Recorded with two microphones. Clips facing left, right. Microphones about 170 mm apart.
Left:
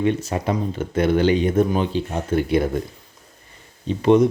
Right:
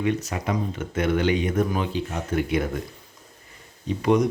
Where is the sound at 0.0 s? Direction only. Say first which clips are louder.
Left 4 dB; 30° left (ahead or behind).